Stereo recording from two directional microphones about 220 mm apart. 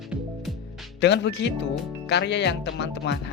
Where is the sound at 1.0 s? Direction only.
50° left (ahead or behind).